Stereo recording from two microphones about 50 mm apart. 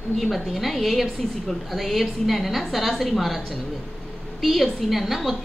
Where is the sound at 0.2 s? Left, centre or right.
Centre.